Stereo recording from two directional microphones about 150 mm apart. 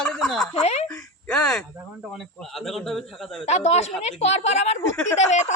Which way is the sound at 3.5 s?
45° left (ahead or behind).